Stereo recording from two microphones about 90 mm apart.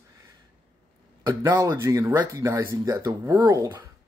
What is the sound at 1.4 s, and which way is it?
Speech, 35° right (ahead or behind).